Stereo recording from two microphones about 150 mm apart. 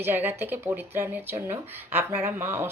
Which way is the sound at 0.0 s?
15° right (ahead or behind).